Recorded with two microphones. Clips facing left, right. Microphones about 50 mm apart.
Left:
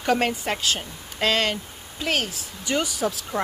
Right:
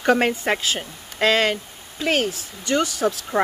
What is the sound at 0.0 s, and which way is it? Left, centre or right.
A woman's voice, centre.